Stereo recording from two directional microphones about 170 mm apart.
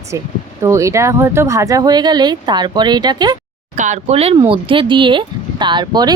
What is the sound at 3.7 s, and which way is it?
Speech, 45° right (ahead or behind).